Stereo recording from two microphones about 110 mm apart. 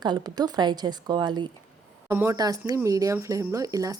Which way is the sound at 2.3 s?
35° right (ahead or behind).